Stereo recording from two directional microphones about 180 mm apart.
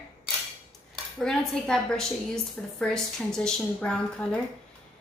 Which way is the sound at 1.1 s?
5° left (ahead or behind).